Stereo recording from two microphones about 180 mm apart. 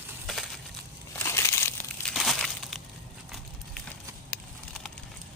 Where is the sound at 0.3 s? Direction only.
Centre (ahead or behind).